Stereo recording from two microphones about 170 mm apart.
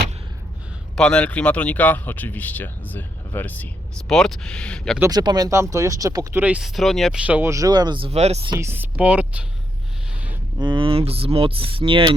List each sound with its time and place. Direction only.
0.9 s speech: 5° left (ahead or behind)
4.9 s speech: 20° right (ahead or behind); by 8.5 s 40° right (ahead or behind)
8.5 s speech: 15° right (ahead or behind)
10.6 s speech: 30° right (ahead or behind)